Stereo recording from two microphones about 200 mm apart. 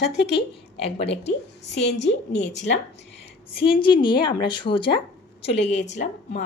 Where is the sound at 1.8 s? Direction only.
60° left (ahead or behind).